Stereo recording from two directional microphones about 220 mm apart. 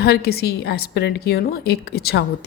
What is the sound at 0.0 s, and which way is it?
Speech, 45° left (ahead or behind).